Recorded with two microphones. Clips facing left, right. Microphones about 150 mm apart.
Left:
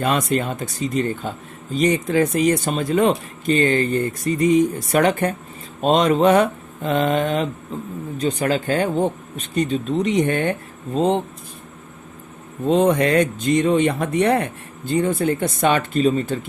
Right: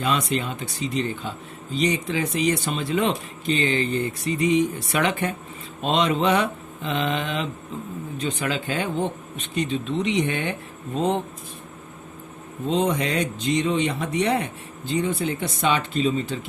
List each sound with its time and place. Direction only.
0.0 s speech: 50° left (ahead or behind)
10.9 s speech: 30° left (ahead or behind)
12.6 s speech: 50° left (ahead or behind)